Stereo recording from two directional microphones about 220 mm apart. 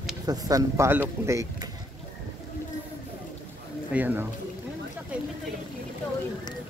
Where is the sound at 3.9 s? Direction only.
10° right (ahead or behind).